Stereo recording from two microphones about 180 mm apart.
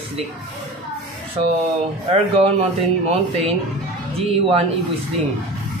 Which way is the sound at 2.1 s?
35° right (ahead or behind).